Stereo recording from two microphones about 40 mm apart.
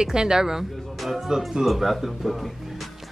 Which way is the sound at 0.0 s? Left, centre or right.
Centre.